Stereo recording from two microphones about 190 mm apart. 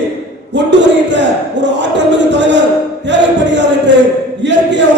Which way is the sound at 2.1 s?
65° right (ahead or behind).